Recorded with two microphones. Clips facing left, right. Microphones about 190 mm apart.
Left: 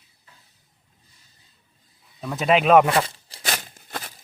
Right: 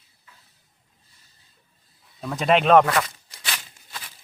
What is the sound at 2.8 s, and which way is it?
Tearing, 30° left (ahead or behind).